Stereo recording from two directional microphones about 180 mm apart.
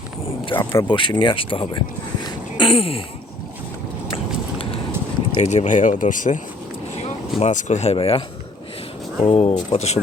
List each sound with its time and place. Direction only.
0.6 s speech: 15° left (ahead or behind)
0.9 s speech: 25° left (ahead or behind)
2.2 s a sound: 30° left (ahead or behind)
4.1 s a sound: 30° left (ahead or behind)
5.4 s speech: 35° left (ahead or behind)
9.2 s speech: 35° left (ahead or behind)